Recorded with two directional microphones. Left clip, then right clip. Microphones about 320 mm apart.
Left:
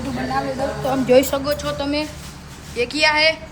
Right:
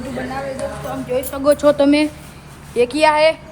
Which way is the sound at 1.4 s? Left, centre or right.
Centre.